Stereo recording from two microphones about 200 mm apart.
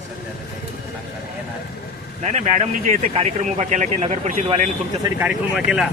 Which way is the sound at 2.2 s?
35° right (ahead or behind).